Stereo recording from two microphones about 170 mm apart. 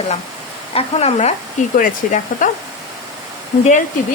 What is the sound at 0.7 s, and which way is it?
Speech, 35° left (ahead or behind).